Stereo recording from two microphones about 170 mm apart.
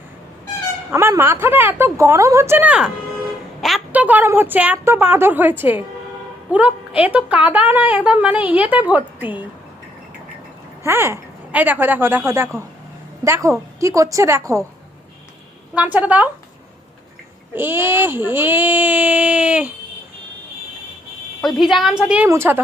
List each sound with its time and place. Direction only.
0.9 s a woman's voice: 15° right (ahead or behind)
10.8 s a woman's voice: 15° right (ahead or behind)
15.7 s a woman's voice: 10° right (ahead or behind)
17.5 s a woman's voice: 15° right (ahead or behind)
21.4 s a woman's voice: centre (ahead or behind)